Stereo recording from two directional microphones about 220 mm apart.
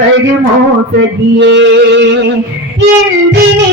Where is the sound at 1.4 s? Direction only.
55° right (ahead or behind).